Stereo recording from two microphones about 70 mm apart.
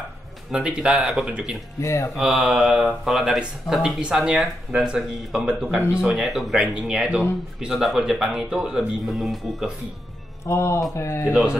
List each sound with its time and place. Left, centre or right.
0.5 s speech: centre
1.8 s speech: left
2.1 s speech: centre
4.0 s speech: centre
10.4 s a man's voice: left